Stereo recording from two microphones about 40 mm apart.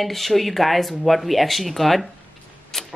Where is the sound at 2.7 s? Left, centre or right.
Centre.